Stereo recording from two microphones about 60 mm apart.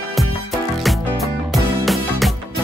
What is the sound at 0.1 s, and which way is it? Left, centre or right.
Music, centre.